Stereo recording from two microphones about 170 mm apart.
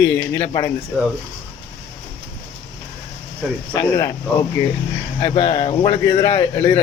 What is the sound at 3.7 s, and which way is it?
Speech, 20° left (ahead or behind).